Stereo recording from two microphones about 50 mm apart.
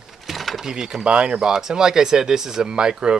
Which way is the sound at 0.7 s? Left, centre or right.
Centre.